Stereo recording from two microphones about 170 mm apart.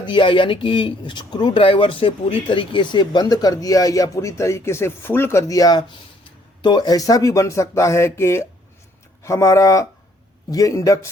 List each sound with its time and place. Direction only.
0.0 s speech: 30° left (ahead or behind)